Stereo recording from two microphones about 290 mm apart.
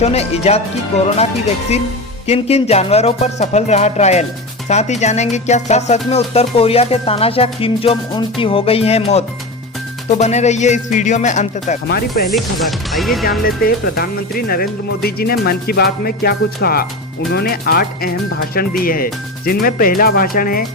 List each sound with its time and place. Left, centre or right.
0.0 s music: left
12.3 s speech: centre
13.4 s speech: left